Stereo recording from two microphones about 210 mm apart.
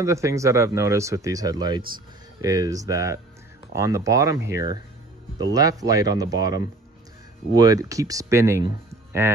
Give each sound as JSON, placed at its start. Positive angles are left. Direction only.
{"t": 0.0, "sound": "speech", "side_deg": -15}